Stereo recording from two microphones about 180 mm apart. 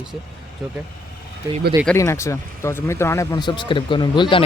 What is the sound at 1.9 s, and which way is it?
Speech, 15° left (ahead or behind).